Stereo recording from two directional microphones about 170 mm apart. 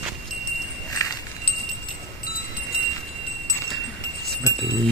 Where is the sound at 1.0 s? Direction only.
20° left (ahead or behind).